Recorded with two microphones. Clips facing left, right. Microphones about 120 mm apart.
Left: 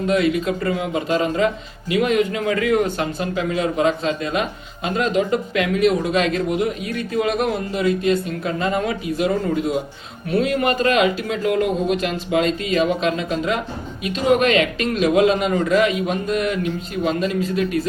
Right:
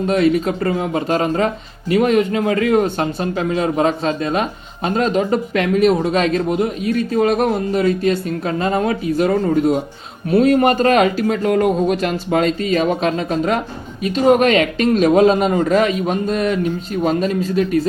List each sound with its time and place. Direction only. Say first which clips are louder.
0.1 s speech: right 3 dB; 40° right (ahead or behind)